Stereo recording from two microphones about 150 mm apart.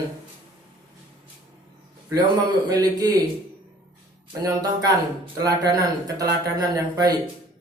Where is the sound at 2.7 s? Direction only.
25° right (ahead or behind).